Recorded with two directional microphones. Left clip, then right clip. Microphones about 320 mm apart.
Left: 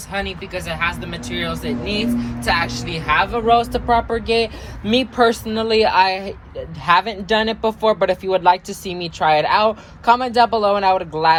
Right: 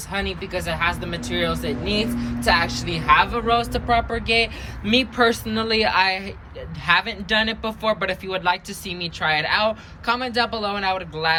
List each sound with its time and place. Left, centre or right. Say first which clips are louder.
0.1 s speech: left 1 dB; centre